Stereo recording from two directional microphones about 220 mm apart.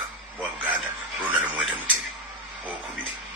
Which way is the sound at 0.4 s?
5° right (ahead or behind).